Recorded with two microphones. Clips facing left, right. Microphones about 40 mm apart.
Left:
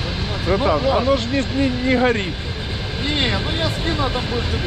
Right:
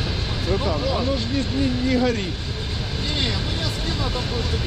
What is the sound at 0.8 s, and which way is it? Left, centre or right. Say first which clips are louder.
Speech: left 6 dB; left.